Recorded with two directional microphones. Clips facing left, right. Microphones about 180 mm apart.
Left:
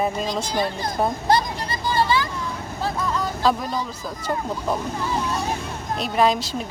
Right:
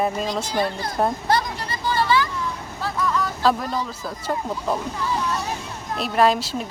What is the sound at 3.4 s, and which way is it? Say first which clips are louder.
Speech: even; centre (ahead or behind).